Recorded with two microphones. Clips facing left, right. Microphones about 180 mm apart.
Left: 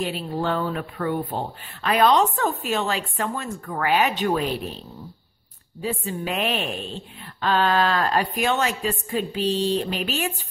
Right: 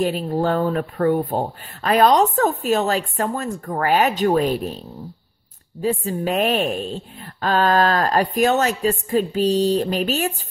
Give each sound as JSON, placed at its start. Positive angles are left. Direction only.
{"t": 0.0, "sound": "speech", "side_deg": -45}